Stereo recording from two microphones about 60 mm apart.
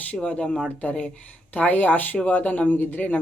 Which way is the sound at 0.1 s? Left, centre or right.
Left.